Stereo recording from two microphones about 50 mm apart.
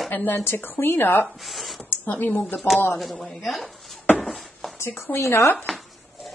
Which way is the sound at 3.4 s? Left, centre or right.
Centre.